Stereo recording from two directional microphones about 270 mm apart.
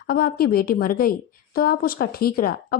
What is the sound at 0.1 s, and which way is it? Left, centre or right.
A woman's voice, left.